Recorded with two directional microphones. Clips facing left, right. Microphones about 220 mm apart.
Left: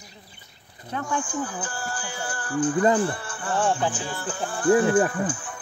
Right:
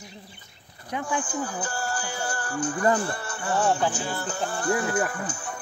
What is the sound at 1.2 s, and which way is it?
Speech, 40° right (ahead or behind).